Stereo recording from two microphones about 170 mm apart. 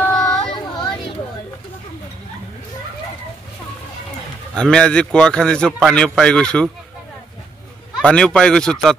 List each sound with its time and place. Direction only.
0.0 s a sound: 10° left (ahead or behind)
0.4 s child singing: 30° left (ahead or behind)
4.6 s a man's voice: 5° left (ahead or behind)
8.0 s a man's voice: 5° left (ahead or behind)